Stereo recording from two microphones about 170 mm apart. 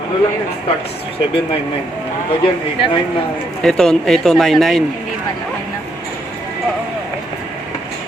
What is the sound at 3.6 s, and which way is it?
Speech, 5° left (ahead or behind).